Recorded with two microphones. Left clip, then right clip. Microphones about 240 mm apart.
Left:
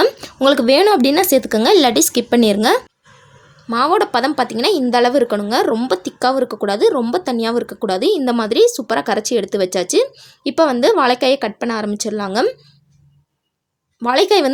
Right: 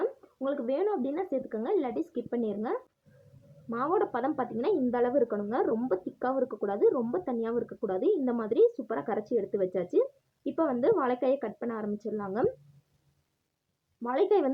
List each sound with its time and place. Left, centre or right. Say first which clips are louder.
0.0 s a woman's voice: left 18 dB; left
14.0 s a woman's voice: left 13 dB; left